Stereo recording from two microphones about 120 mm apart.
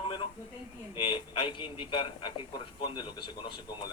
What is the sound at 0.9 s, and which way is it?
A man's voice, 45° left (ahead or behind).